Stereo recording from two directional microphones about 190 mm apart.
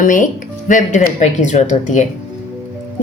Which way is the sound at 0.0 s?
45° left (ahead or behind).